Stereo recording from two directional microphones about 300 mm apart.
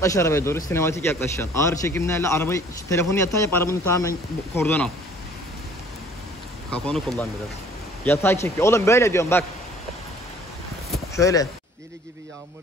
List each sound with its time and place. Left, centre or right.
0.0 s a man's voice: centre
6.7 s a man's voice: centre
10.9 s a sound: centre